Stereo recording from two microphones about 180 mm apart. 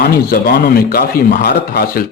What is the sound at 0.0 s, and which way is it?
A man's voice, 65° left (ahead or behind).